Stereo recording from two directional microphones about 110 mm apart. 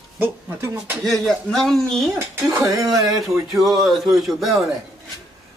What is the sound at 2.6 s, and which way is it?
Speech, 30° right (ahead or behind).